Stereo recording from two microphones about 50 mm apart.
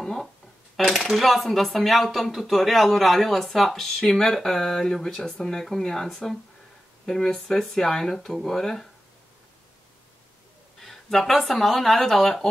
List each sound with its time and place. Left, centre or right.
0.0 s a sound: centre
0.8 s speech: centre
10.8 s speech: centre